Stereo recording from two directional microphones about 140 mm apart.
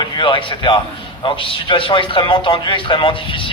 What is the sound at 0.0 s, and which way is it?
A man's voice, 35° left (ahead or behind).